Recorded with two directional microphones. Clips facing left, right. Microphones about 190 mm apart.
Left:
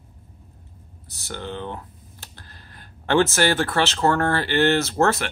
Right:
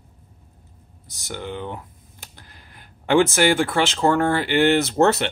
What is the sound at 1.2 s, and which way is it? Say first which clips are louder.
Speech: right 1 dB; 15° right (ahead or behind).